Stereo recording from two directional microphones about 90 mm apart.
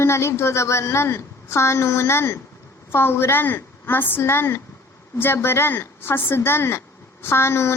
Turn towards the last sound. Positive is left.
turn(degrees=30)  # may be behind; listen again after turning